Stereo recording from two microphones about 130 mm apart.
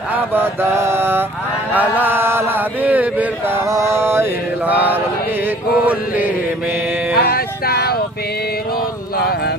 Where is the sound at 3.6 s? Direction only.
25° right (ahead or behind).